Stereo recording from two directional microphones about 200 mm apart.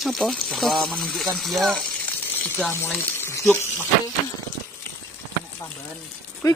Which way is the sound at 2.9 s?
10° left (ahead or behind).